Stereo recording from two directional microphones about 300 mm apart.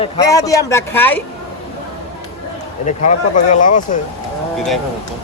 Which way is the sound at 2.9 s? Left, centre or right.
Left.